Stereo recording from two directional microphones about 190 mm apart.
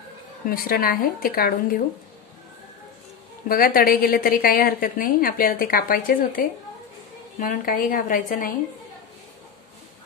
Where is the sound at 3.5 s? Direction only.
50° left (ahead or behind).